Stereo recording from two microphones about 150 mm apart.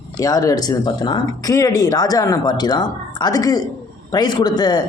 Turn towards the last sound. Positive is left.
turn(degrees=25)  # may be behind; listen again after turning